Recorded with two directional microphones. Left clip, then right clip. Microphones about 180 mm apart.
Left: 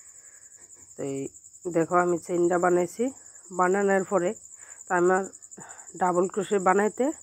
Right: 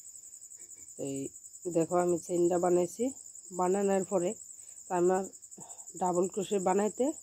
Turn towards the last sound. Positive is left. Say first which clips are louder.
# left 6 dB
turn(degrees=0)  # may be behind; listen again after turning